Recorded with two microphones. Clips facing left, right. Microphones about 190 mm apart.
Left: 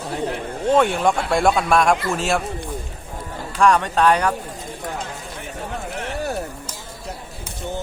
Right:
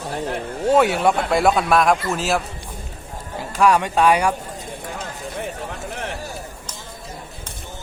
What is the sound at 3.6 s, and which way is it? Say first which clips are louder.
Speech: even; 10° right (ahead or behind).